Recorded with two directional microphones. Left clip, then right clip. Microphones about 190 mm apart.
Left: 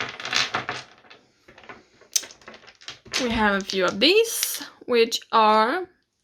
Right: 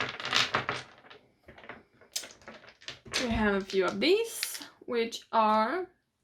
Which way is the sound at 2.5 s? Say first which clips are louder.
Left 4 dB; centre (ahead or behind).